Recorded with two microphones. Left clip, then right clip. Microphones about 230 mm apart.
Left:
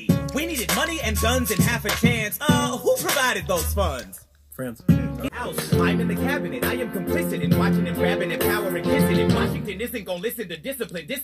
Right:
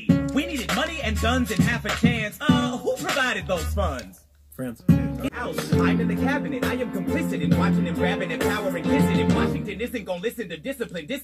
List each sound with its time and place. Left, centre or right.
0.0 s speech: left
4.8 s speech: centre
5.6 s music: left